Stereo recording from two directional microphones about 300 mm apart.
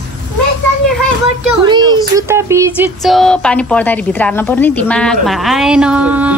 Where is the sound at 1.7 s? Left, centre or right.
Centre.